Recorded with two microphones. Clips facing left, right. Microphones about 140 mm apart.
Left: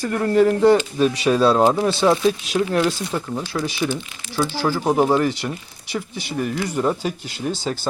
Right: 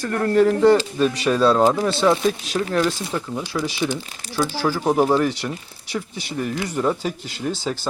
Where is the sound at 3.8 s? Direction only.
Centre (ahead or behind).